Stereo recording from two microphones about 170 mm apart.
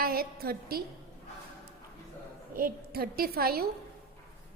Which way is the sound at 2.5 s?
60° right (ahead or behind).